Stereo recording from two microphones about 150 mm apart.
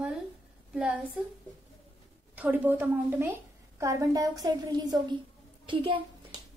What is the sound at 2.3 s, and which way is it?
A woman's voice, 10° right (ahead or behind).